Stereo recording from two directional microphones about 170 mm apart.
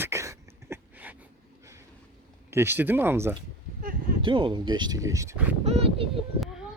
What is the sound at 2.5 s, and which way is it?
Speech, 15° right (ahead or behind).